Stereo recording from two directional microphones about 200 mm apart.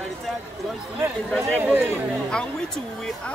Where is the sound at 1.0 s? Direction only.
10° right (ahead or behind).